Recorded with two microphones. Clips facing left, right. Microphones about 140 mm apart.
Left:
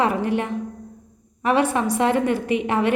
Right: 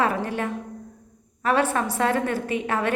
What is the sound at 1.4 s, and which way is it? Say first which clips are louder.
A woman's voice: left 2 dB; 15° left (ahead or behind).